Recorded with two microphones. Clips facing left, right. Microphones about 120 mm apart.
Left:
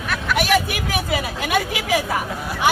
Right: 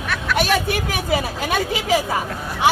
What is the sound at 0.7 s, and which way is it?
A woman's voice, 30° right (ahead or behind).